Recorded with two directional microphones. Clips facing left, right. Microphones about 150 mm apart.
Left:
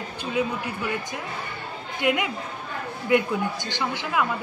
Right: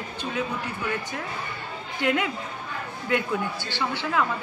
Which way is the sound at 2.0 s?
15° left (ahead or behind).